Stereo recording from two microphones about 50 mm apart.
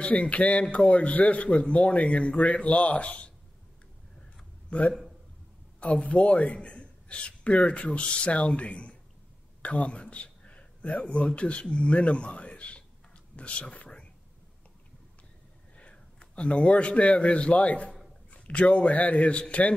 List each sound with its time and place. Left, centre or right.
0.0 s a man's voice: left
4.6 s a man's voice: left
9.6 s a sound: left
11.0 s a man's voice: left
11.7 s a sound: left
15.7 s a man's voice: left